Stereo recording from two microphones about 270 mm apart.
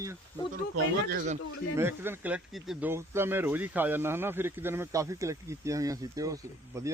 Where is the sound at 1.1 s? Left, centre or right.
Right.